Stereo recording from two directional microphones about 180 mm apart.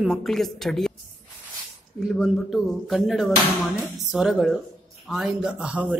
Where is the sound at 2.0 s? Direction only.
Centre (ahead or behind).